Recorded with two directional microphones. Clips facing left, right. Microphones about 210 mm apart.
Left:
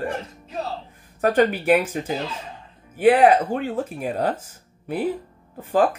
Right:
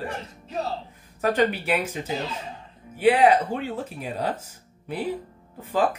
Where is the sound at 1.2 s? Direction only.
50° left (ahead or behind).